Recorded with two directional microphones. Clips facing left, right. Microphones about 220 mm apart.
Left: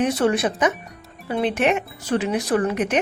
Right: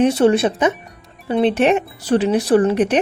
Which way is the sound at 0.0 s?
30° right (ahead or behind).